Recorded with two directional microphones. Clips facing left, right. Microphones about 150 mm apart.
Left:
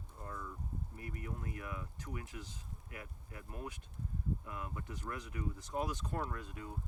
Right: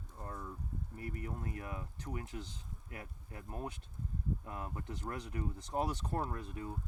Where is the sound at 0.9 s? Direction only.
35° right (ahead or behind).